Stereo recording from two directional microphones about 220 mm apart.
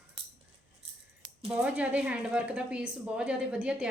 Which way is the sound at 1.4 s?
5° right (ahead or behind).